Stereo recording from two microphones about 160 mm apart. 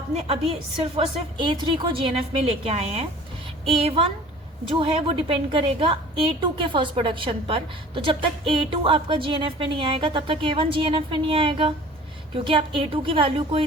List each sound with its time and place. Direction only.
0.9 s a woman's voice: 30° right (ahead or behind)